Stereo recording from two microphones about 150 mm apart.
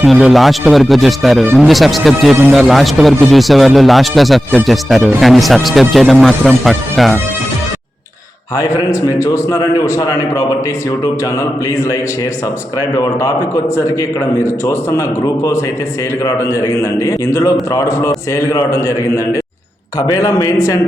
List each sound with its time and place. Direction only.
0.0 s a man's voice: 5° right (ahead or behind)
8.5 s a man's voice: 20° left (ahead or behind)
13.0 s a man's voice: 20° left (ahead or behind)
14.4 s a man's voice: 20° left (ahead or behind)